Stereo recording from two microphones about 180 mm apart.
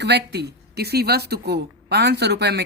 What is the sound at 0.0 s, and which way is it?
A man's voice, 70° right (ahead or behind).